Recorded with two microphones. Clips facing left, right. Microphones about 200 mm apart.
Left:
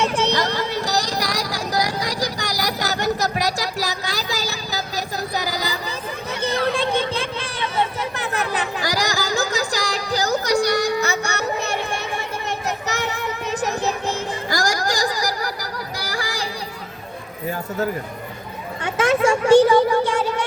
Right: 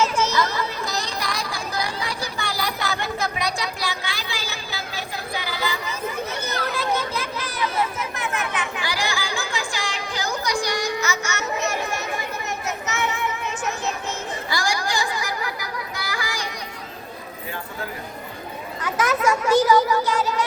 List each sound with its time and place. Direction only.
0.8 s a sound: 40° left (ahead or behind)
6.4 s children playing: 30° left (ahead or behind)
10.6 s music: 65° left (ahead or behind)
11.0 s music: 35° left (ahead or behind)
12.5 s child singing: 35° left (ahead or behind)
18.8 s speech: 30° left (ahead or behind)